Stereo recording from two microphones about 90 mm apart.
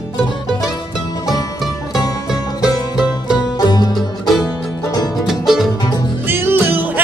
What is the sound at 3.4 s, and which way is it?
Music, 50° left (ahead or behind).